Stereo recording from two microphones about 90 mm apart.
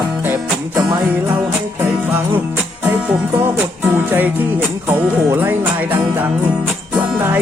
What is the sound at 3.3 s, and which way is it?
Music, 25° right (ahead or behind).